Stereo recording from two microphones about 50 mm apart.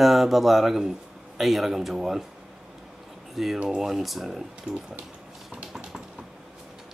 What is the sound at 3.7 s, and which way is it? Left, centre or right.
Speech, centre.